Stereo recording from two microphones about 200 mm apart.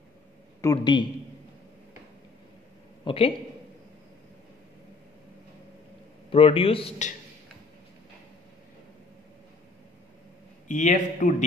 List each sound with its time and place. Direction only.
0.6 s a man's voice: 20° left (ahead or behind)
3.1 s a man's voice: 25° left (ahead or behind)
6.3 s a man's voice: 25° left (ahead or behind)
10.7 s a man's voice: 40° left (ahead or behind)